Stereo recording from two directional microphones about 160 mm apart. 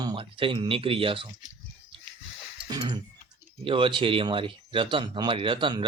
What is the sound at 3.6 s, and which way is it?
Speech, 35° right (ahead or behind).